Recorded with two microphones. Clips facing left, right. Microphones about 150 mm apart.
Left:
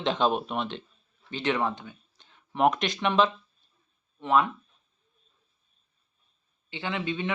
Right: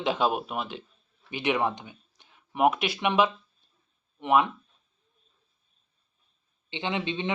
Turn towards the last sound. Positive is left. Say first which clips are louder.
# right 1 dB
turn(degrees=-25)  # may be behind; listen again after turning